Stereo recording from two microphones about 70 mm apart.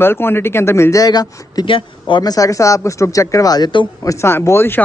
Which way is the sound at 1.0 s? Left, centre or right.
Left.